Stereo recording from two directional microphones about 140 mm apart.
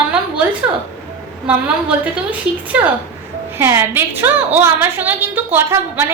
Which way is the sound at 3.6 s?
15° right (ahead or behind).